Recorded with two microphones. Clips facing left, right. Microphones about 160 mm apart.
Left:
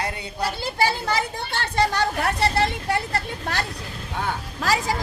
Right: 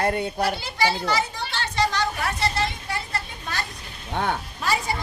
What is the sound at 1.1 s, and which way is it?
Speech, 55° left (ahead or behind).